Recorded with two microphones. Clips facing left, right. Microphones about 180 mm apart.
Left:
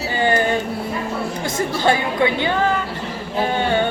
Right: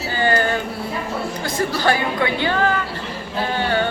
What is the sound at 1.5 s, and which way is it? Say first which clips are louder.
Speech: left 1 dB; 20° left (ahead or behind).